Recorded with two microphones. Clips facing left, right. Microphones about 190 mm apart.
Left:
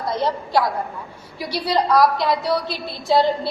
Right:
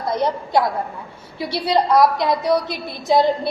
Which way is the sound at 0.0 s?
20° right (ahead or behind).